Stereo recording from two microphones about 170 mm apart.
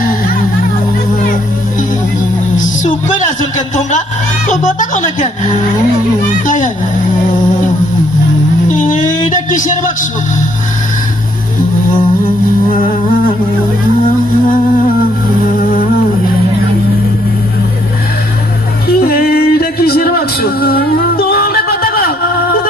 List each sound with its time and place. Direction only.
2.6 s music: 45° left (ahead or behind)
4.4 s speech: 45° left (ahead or behind)
8.6 s music: 50° left (ahead or behind)
15.5 s humming: 55° left (ahead or behind)
18.9 s music: 60° left (ahead or behind)